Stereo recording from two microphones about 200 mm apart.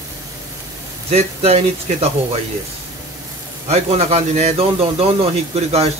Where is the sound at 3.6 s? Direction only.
30° right (ahead or behind).